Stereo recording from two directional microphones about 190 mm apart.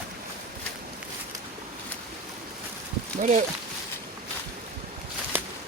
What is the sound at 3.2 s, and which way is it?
Speech, 40° right (ahead or behind).